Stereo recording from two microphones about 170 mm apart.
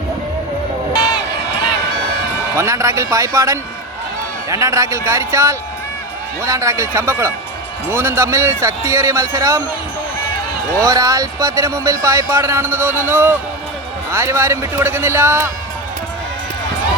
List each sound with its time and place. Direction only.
2.6 s speech: 15° right (ahead or behind)
10.8 s speech: 20° right (ahead or behind)